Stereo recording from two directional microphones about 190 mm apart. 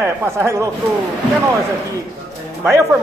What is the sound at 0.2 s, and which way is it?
Speech, 15° right (ahead or behind).